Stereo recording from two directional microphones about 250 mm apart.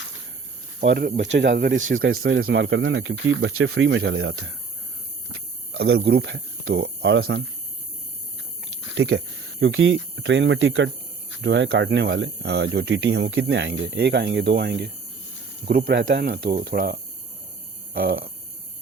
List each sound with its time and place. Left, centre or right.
0.8 s speech: right
1.9 s speech: right
9.0 s speech: right